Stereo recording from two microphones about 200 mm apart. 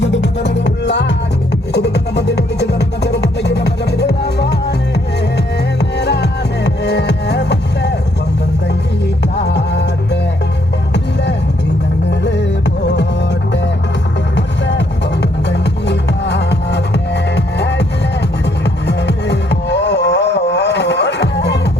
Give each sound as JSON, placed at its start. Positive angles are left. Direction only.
{"t": 0.0, "sound": "music", "side_deg": 60}
{"t": 6.0, "sound": "music", "side_deg": 60}
{"t": 9.4, "sound": "music", "side_deg": 60}
{"t": 14.3, "sound": "music", "side_deg": 60}